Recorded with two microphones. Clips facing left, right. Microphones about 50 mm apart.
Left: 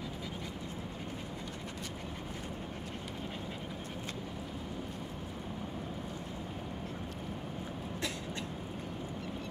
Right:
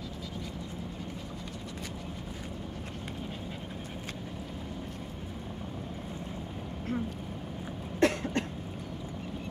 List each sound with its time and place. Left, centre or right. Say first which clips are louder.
8.0 s cough: right 14 dB; right